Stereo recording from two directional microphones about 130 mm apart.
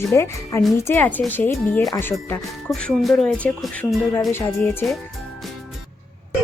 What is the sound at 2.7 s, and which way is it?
Speech, 5° left (ahead or behind).